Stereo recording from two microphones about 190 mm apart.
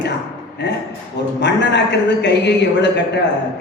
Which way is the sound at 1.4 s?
65° left (ahead or behind).